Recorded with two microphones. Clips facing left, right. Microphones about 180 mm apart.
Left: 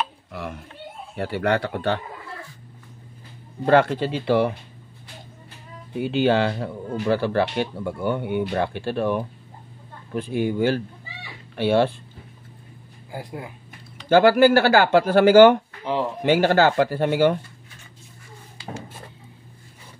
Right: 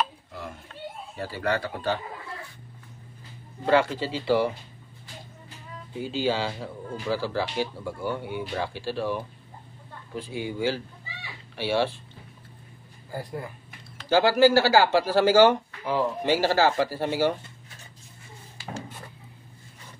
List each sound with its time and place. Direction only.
0.3 s a sound: 75° left (ahead or behind)
1.1 s speech: 65° left (ahead or behind)
3.6 s speech: 55° left (ahead or behind)
5.9 s speech: 65° left (ahead or behind)
13.1 s speech: 10° left (ahead or behind)
14.0 s speech: 55° left (ahead or behind)